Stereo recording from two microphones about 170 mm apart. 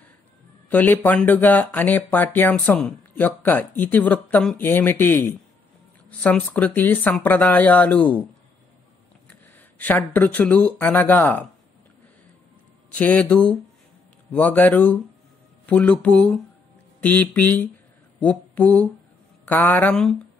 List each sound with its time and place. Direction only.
0.7 s speech: 10° left (ahead or behind)
9.3 s speech: 10° left (ahead or behind)
12.9 s speech: 10° left (ahead or behind)
18.2 s a sound: 10° left (ahead or behind)
19.4 s speech: 10° left (ahead or behind)